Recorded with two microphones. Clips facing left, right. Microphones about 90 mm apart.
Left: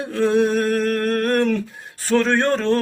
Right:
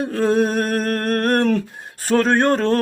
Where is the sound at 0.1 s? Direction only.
45° right (ahead or behind).